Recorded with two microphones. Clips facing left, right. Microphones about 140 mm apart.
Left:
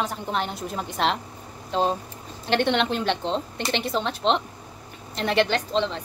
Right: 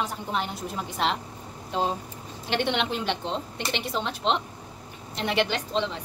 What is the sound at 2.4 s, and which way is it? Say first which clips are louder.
A woman's voice: left 4 dB; 10° right (ahead or behind).